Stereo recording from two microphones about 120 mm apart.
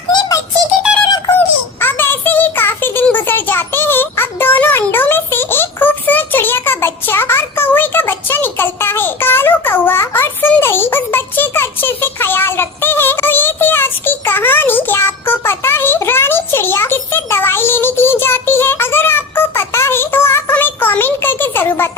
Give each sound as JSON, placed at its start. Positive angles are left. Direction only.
{"t": 0.1, "sound": "synthetic singing", "side_deg": 35}
{"t": 1.3, "sound": "child singing", "side_deg": 15}